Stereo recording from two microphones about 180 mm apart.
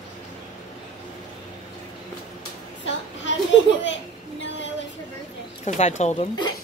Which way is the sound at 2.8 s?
90° left.